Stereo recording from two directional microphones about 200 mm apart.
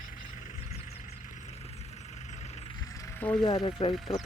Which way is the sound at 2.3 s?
35° left (ahead or behind).